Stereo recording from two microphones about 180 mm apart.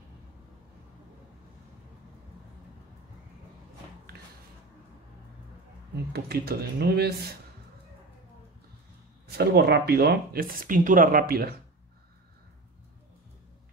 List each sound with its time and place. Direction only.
6.1 s speech: 60° right (ahead or behind)
9.4 s speech: 60° right (ahead or behind)